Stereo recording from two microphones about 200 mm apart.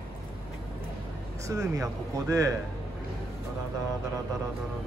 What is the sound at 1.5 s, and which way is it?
Speech, 15° right (ahead or behind).